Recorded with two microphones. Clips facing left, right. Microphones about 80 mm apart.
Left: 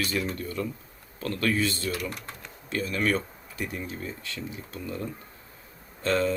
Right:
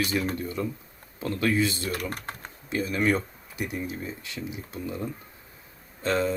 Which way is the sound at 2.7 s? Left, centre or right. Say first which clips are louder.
Right 2 dB; centre.